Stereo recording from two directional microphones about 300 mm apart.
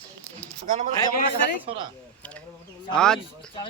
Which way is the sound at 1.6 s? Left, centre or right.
Centre.